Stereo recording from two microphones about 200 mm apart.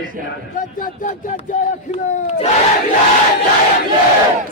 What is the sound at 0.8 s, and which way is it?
Battle cry, 40° left (ahead or behind).